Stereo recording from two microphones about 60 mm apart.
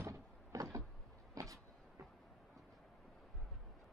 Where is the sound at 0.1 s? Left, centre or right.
Right.